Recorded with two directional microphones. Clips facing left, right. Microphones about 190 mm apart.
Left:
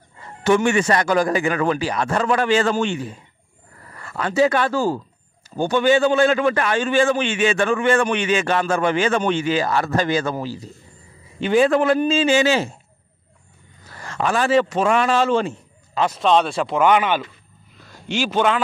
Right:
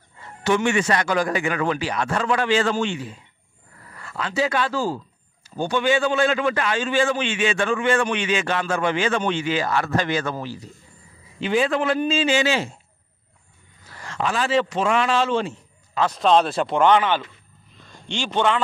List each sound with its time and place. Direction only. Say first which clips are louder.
0.4 s a man's voice: left 3 dB; 45° left (ahead or behind)
11.3 s a man's voice: left 5 dB; 45° left (ahead or behind)
13.9 s a man's voice: left 3 dB; 45° left (ahead or behind)
16.2 s a man's voice: even; centre (ahead or behind)